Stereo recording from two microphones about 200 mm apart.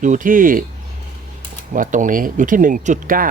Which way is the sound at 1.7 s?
40° right (ahead or behind).